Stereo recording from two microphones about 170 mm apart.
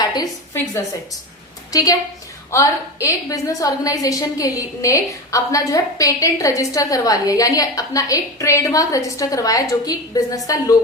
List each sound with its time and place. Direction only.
0.0 s a woman's voice: 25° left (ahead or behind)